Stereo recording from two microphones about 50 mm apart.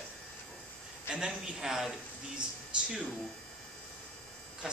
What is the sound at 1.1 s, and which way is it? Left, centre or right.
Speech, centre.